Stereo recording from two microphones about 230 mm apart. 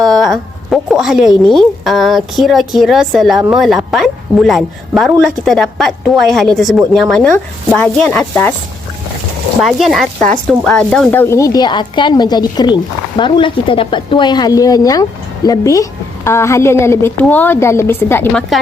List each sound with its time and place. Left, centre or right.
0.0 s a sound: centre
1.5 s a woman's voice: centre
9.6 s speech: centre